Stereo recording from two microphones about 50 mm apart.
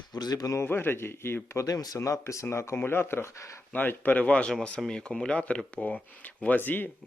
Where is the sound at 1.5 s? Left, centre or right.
Left.